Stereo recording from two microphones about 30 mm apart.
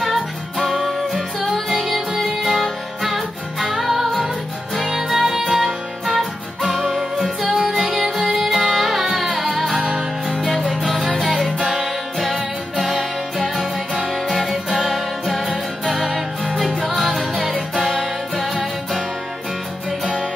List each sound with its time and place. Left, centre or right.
0.0 s music: centre
4.0 s music: centre
4.7 s music: centre
14.7 s music: centre
18.3 s music: centre